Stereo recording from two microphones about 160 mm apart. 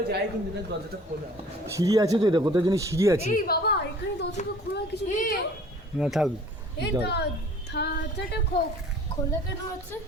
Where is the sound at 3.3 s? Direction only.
65° left (ahead or behind); by 4.2 s 90° left.